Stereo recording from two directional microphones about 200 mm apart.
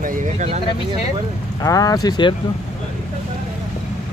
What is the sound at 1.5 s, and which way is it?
Speech, 20° left (ahead or behind).